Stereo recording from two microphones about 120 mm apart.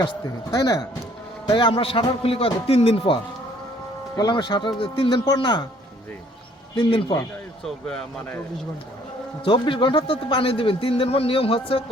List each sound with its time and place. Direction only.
0.5 s a man's voice: 30° left (ahead or behind); by 3.2 s 50° left (ahead or behind)
4.2 s speech: 35° left (ahead or behind)
6.7 s speech: 40° left (ahead or behind)
7.6 s speech: 5° left (ahead or behind)
9.4 s a man's voice: 45° left (ahead or behind)